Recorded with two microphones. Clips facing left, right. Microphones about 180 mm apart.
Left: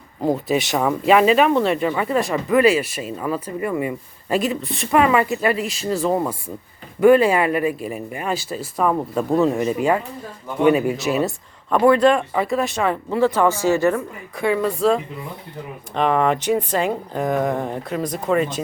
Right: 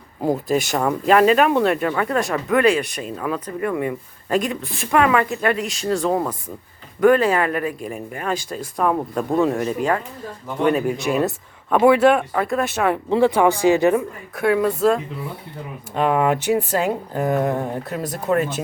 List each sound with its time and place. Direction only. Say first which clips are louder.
0.4 s speech: even; centre (ahead or behind)
13.1 s speech: right 2 dB; 15° right (ahead or behind)
14.3 s speech: right 2 dB; centre (ahead or behind)